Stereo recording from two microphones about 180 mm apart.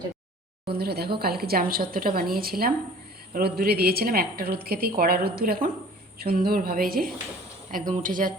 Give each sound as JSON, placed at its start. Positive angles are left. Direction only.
{"t": 0.7, "sound": "a woman's voice", "side_deg": -60}